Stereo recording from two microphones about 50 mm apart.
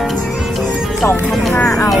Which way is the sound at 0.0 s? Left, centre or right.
Centre.